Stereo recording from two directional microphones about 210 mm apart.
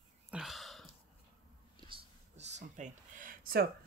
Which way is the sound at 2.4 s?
35° right (ahead or behind).